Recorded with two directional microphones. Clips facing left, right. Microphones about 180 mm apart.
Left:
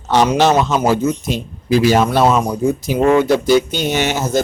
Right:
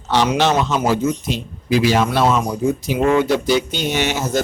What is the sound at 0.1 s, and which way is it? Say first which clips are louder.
Speech: left 3 dB; 45° left (ahead or behind).